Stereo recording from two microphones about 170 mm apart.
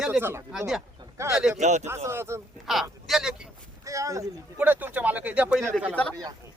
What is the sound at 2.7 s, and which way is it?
Speech, centre (ahead or behind).